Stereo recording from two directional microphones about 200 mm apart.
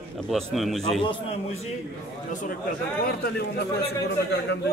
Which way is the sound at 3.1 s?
50° left (ahead or behind).